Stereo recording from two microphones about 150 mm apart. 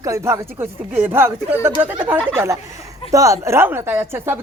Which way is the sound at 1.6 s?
15° right (ahead or behind).